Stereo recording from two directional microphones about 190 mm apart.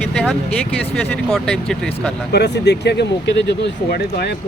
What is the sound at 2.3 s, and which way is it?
Speech, 60° left (ahead or behind).